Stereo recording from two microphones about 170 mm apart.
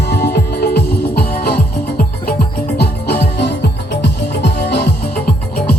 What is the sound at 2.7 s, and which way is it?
Music, 80° left.